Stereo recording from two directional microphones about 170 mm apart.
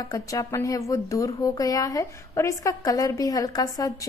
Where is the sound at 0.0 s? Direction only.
20° left (ahead or behind).